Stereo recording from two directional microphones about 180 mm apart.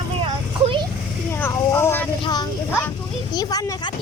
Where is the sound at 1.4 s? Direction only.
15° left (ahead or behind).